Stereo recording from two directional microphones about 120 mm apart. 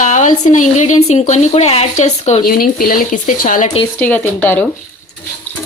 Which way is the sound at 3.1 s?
90° left.